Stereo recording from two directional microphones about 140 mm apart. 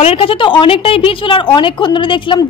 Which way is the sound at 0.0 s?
40° left (ahead or behind).